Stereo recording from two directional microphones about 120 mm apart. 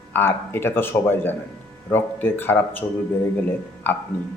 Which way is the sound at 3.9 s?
15° left (ahead or behind).